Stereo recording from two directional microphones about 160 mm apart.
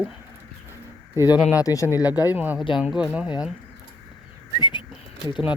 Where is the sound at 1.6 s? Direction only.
20° left (ahead or behind).